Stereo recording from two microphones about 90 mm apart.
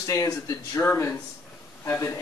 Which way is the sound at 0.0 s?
40° left (ahead or behind).